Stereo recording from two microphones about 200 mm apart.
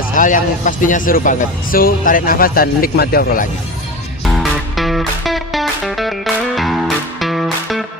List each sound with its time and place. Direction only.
0.2 s a man's voice: 40° left (ahead or behind)
4.8 s music: centre (ahead or behind)